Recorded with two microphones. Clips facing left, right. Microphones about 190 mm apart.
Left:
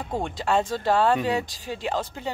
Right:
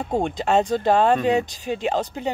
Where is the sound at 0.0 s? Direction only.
20° right (ahead or behind).